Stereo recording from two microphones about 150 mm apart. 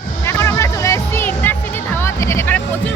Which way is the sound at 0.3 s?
15° left (ahead or behind).